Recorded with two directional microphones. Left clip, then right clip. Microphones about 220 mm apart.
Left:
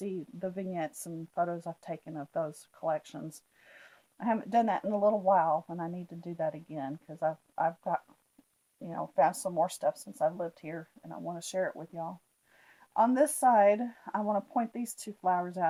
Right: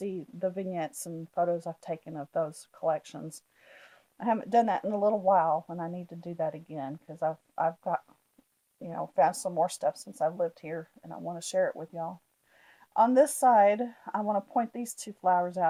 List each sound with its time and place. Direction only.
0.0 s speech: 35° right (ahead or behind)